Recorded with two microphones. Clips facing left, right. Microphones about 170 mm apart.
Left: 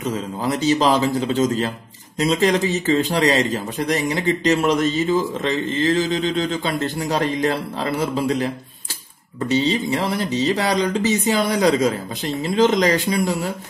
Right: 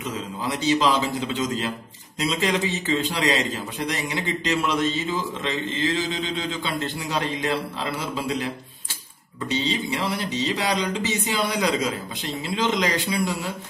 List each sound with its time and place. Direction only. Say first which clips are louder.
0.0 s speech: left 6 dB; 45° left (ahead or behind)
9.5 s speech: left 6 dB; 45° left (ahead or behind)